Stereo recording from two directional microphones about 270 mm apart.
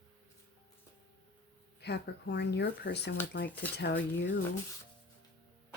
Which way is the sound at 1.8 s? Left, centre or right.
Left.